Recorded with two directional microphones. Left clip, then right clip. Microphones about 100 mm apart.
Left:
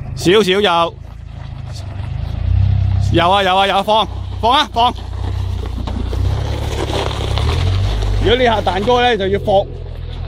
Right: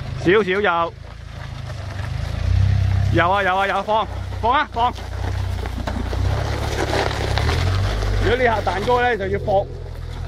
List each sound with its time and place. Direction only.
0.2 s speech: 30° left (ahead or behind)
3.2 s speech: 35° left (ahead or behind)
5.2 s vehicle: 30° right (ahead or behind); by 8.0 s 50° right (ahead or behind)
8.0 s boat: 35° right (ahead or behind)
8.3 s speech: 55° left (ahead or behind)